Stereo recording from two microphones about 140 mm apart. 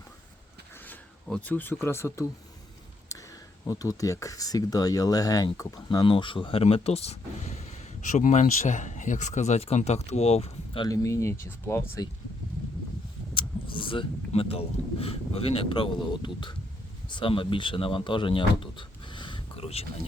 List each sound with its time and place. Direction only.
0.9 s speech: 10° left (ahead or behind)
3.1 s a sound: 25° left (ahead or behind)
3.7 s speech: 25° left (ahead or behind); by 10.8 s 50° left (ahead or behind)
10.8 s speech: 25° left (ahead or behind)
13.3 s speech: 35° left (ahead or behind)